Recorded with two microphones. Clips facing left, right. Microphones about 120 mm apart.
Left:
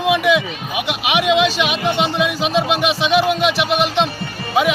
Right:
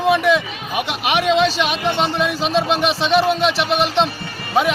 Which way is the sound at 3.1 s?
35° right (ahead or behind).